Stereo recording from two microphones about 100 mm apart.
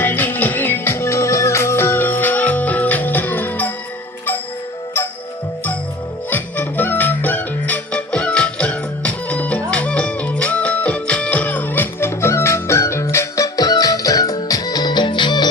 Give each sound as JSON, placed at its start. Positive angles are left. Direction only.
{"t": 0.0, "sound": "music", "side_deg": 20}
{"t": 6.3, "sound": "music", "side_deg": 20}